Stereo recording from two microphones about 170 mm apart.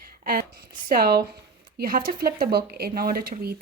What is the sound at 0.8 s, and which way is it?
Speech, 65° right (ahead or behind).